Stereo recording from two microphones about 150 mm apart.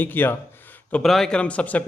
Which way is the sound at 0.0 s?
15° left (ahead or behind).